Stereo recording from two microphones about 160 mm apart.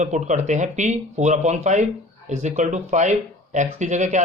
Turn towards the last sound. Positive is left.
turn(degrees=-50)  # may be behind; listen again after turning